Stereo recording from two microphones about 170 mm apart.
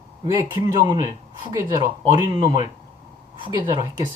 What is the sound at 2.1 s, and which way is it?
Speech, 25° right (ahead or behind).